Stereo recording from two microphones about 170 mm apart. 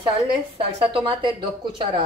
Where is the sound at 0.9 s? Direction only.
30° right (ahead or behind).